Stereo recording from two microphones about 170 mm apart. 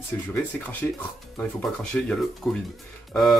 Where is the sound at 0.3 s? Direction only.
10° left (ahead or behind).